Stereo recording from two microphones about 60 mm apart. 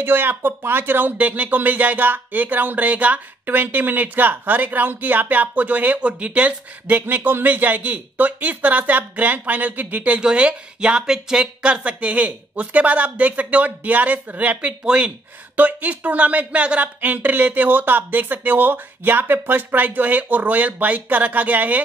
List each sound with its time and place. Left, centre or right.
0.0 s speech: right